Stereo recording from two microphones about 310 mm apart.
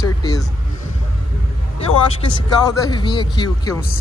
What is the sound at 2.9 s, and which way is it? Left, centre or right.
Speech, centre.